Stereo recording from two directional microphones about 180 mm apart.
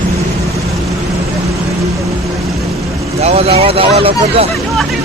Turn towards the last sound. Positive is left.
turn(degrees=-30)  # may be behind; listen again after turning